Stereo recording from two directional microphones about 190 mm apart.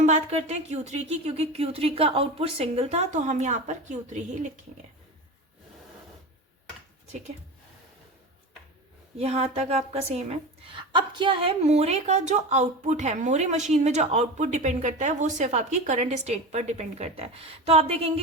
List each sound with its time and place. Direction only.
0.0 s a woman's voice: 35° right (ahead or behind)
9.1 s a woman's voice: 35° right (ahead or behind)